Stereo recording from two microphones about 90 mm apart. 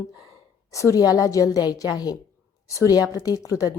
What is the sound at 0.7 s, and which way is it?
A woman's voice, 35° left (ahead or behind).